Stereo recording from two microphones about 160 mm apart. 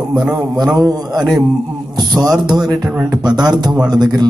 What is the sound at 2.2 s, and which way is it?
A man's voice, 25° right (ahead or behind).